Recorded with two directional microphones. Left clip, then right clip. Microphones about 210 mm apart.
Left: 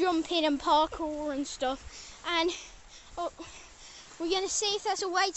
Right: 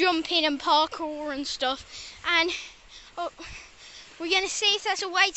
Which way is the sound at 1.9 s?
15° left (ahead or behind).